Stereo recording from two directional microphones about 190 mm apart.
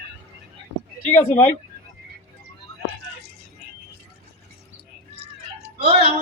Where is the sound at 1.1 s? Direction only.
10° left (ahead or behind).